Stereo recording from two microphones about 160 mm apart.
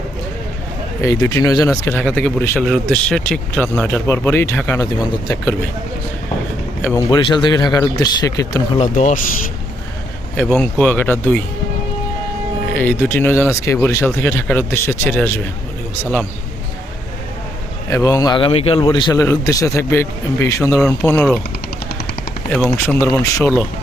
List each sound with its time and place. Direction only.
1.0 s a man's voice: 25° left (ahead or behind)
6.9 s a man's voice: 30° left (ahead or behind)
8.8 s speech: 50° left (ahead or behind)
10.3 s speech: 5° left (ahead or behind)
12.7 s speech: 10° left (ahead or behind)
17.8 s a man's voice: 20° left (ahead or behind)
22.4 s speech: 5° left (ahead or behind)
23.0 s a man's voice: 20° left (ahead or behind)